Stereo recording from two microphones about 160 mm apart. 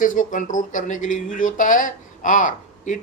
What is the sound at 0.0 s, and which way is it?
Speech, 55° left (ahead or behind).